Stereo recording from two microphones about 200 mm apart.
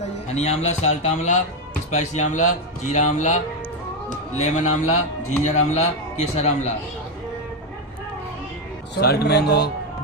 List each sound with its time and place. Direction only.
0.0 s a man's voice: 30° left (ahead or behind)
9.0 s speech: 50° left (ahead or behind)